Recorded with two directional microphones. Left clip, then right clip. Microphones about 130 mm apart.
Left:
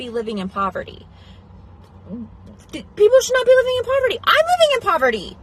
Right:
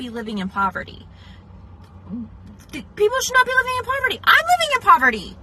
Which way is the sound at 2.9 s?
25° left (ahead or behind).